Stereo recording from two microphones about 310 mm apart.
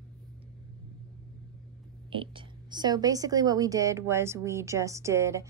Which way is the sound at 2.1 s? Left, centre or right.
Centre.